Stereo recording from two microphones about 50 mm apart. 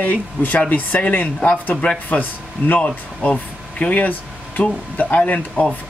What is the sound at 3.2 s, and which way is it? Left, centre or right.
Speech, left.